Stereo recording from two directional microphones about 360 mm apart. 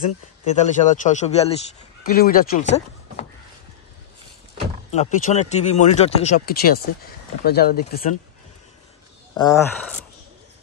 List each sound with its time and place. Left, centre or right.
0.6 s speech: centre
4.9 s speech: centre
9.3 s speech: centre